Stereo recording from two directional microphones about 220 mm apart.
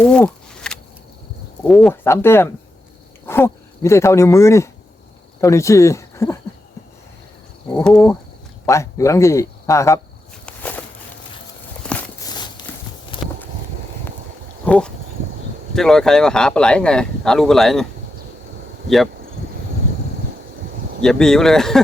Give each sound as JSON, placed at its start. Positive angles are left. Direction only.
{"t": 0.0, "sound": "a sound", "side_deg": 5}
{"t": 1.6, "sound": "speech", "side_deg": 0}
{"t": 7.7, "sound": "speech", "side_deg": 5}
{"t": 10.4, "sound": "walk", "side_deg": 5}
{"t": 12.2, "sound": "walk", "side_deg": 20}
{"t": 13.1, "sound": "clip-clop", "side_deg": 20}
{"t": 14.6, "sound": "a sound", "side_deg": 5}
{"t": 15.7, "sound": "speech", "side_deg": 0}
{"t": 21.0, "sound": "speech", "side_deg": 5}